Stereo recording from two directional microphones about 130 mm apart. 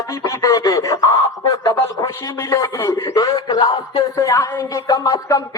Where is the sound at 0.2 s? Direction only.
25° left (ahead or behind).